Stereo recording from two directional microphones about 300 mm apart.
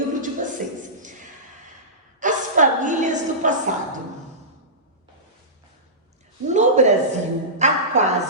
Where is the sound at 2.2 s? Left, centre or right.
Right.